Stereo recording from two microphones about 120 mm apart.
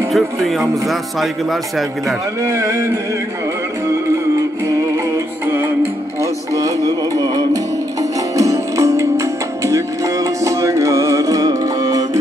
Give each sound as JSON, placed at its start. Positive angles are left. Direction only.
{"t": 0.1, "sound": "a man's voice", "side_deg": 0}
{"t": 2.4, "sound": "a sound", "side_deg": -25}
{"t": 4.6, "sound": "music", "side_deg": -20}